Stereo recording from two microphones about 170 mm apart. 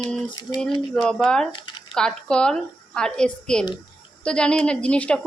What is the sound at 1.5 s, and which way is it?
Speech, 30° left (ahead or behind).